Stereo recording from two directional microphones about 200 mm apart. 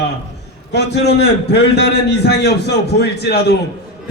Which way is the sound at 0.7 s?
55° left (ahead or behind).